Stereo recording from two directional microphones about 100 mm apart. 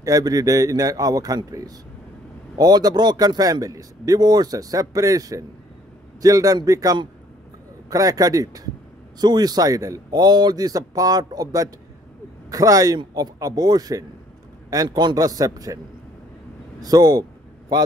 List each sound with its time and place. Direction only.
0.0 s a man's voice: 35° right (ahead or behind)
16.8 s speech: 40° right (ahead or behind)